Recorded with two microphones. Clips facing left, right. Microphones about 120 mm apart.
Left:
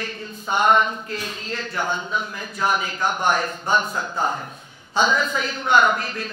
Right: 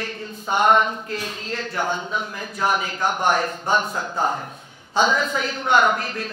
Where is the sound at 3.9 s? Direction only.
35° right (ahead or behind).